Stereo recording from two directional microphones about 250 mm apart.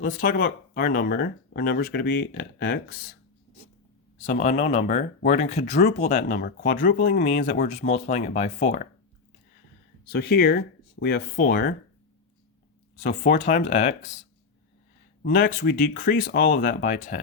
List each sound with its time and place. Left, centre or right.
0.0 s speech: left
4.2 s speech: left
10.1 s speech: left
13.0 s speech: left
15.2 s speech: left